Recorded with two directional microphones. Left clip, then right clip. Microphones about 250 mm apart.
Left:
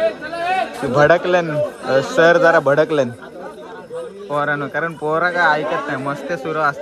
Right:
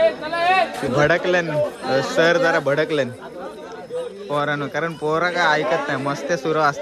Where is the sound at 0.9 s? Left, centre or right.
Centre.